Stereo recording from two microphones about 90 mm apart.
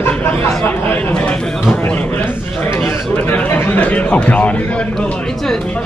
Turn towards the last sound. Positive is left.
turn(degrees=15)  # may be behind; listen again after turning